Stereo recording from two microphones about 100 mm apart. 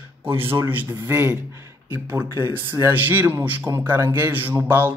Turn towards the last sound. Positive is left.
turn(degrees=-20)  # may be behind; listen again after turning